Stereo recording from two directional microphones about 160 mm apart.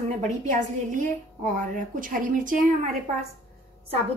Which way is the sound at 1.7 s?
55° right (ahead or behind).